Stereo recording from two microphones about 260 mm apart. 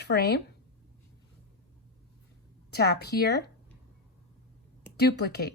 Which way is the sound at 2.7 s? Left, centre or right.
Left.